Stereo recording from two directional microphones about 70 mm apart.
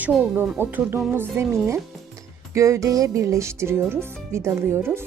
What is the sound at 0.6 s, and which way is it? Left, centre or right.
Speech, right.